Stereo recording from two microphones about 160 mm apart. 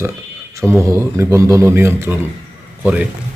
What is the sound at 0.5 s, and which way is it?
A man's voice, 15° right (ahead or behind).